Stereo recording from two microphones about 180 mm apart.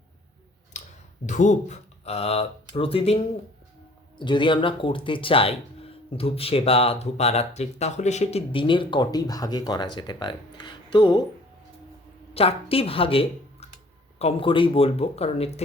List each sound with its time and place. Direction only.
0.7 s a sound: 40° left (ahead or behind)
1.3 s speech: 40° left (ahead or behind)
4.2 s speech: 25° left (ahead or behind)
12.3 s speech: 35° left (ahead or behind)